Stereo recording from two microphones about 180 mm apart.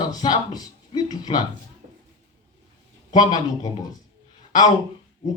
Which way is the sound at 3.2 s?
25° left (ahead or behind).